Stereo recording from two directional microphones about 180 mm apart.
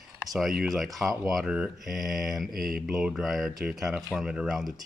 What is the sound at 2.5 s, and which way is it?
Mantra, 55° right (ahead or behind).